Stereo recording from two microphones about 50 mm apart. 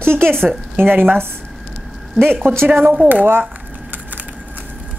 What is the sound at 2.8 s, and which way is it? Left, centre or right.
Speech, right.